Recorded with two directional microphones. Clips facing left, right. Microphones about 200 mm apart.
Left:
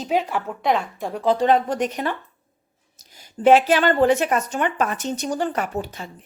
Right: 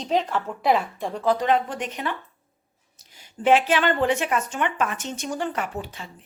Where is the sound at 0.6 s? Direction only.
Centre (ahead or behind).